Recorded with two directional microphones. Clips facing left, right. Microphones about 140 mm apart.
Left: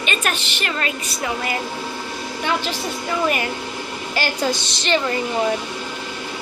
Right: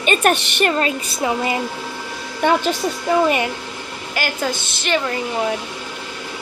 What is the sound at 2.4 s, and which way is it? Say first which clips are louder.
Speech: right 7 dB; 50° right (ahead or behind).